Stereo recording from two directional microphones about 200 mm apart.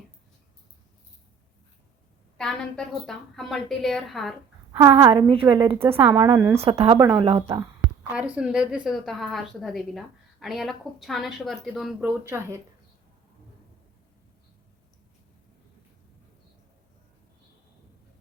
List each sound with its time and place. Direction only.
2.4 s speech: centre (ahead or behind)
4.7 s a woman's voice: 20° right (ahead or behind)
8.1 s speech: 5° right (ahead or behind)